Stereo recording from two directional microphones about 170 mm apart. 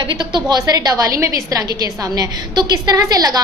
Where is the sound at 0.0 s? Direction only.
25° right (ahead or behind).